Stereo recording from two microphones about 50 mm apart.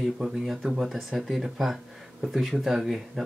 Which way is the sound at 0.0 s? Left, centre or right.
Centre.